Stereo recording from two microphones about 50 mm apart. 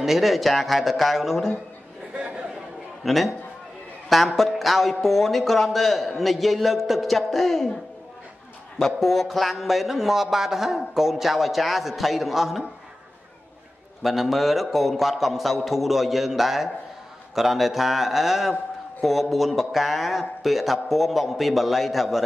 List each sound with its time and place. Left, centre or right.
0.0 s a man's voice: centre
2.1 s chatter: right
3.0 s a man's voice: centre
4.4 s a man's voice: centre
8.7 s a man's voice: centre
14.0 s a man's voice: centre